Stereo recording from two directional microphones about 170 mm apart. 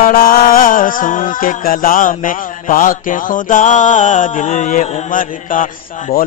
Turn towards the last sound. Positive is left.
turn(degrees=55)  # may be behind; listen again after turning